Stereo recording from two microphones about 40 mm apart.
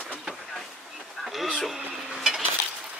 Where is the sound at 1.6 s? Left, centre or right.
Centre.